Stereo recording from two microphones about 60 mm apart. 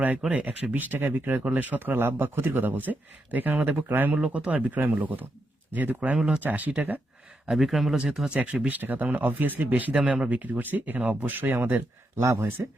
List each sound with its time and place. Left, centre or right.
0.3 s speech: right
4.2 s speech: centre
6.1 s speech: centre
6.4 s speech: right
7.5 s speech: centre
7.9 s speech: centre
8.7 s speech: right
9.9 s speech: centre
10.2 s speech: right
12.1 s speech: right